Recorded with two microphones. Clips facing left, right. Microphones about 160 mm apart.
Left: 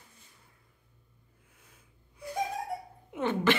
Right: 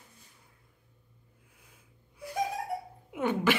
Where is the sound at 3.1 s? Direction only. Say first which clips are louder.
Even; 10° right (ahead or behind).